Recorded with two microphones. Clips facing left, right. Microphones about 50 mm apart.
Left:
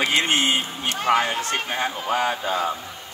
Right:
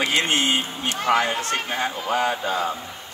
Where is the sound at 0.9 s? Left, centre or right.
Left.